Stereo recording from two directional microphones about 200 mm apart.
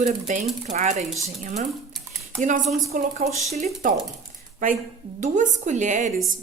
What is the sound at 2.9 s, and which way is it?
Speech, 35° right (ahead or behind).